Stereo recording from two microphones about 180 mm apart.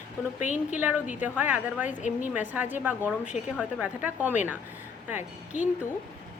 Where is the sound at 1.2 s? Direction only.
10° right (ahead or behind).